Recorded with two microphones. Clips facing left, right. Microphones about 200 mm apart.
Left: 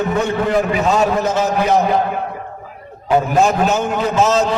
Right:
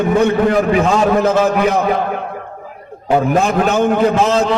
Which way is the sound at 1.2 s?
55° right (ahead or behind).